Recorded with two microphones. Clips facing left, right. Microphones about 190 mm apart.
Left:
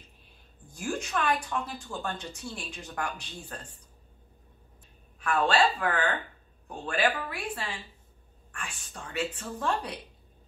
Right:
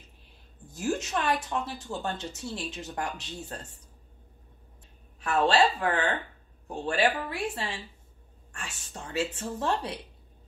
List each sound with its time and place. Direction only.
0.7 s speech: 20° right (ahead or behind)
5.2 s speech: 25° right (ahead or behind)